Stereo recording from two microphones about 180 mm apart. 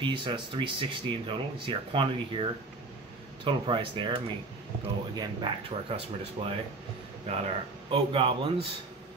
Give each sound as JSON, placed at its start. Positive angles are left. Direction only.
{"t": 0.0, "sound": "speech", "side_deg": -25}